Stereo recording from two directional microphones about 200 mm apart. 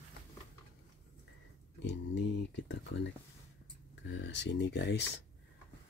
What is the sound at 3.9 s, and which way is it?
Speech, 60° left (ahead or behind).